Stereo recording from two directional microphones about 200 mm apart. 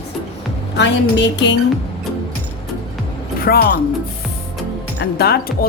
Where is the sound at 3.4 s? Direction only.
50° left (ahead or behind).